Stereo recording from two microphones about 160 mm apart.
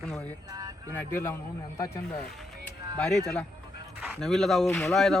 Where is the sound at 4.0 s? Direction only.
Centre (ahead or behind).